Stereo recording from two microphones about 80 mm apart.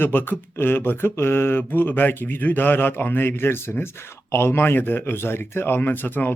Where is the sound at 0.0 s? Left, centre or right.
Left.